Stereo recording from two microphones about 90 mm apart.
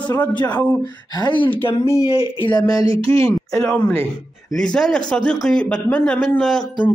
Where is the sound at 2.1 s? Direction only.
85° left.